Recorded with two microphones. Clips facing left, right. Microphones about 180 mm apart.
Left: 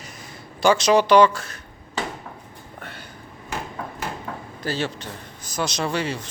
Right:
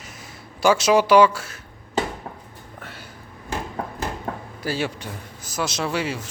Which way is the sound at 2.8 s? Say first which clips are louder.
Left 1 dB; 5° right (ahead or behind).